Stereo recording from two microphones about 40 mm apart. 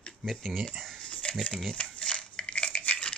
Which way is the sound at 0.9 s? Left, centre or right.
Left.